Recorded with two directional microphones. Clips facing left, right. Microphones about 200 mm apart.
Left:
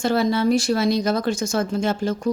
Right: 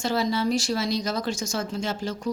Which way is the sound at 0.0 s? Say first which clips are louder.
Left 5 dB; 55° left (ahead or behind).